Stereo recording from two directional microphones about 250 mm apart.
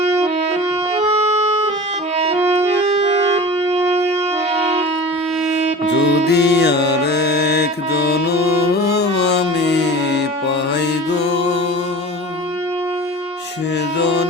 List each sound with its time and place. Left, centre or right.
0.0 s music: right
2.5 s music: right
6.0 s music: left
10.8 s mantra: left
14.0 s music: left